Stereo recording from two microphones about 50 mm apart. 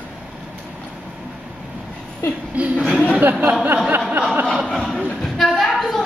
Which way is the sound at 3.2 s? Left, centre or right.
Right.